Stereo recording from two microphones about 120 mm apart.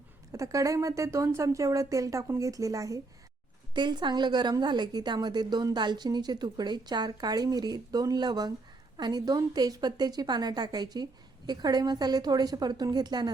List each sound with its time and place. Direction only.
0.3 s speech: 25° right (ahead or behind)
3.8 s a woman's voice: 40° right (ahead or behind)